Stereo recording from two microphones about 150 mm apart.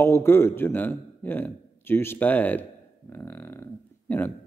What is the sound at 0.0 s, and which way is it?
A man's voice, 15° left (ahead or behind).